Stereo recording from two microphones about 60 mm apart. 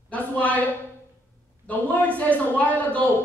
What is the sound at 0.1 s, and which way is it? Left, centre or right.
Speech, left.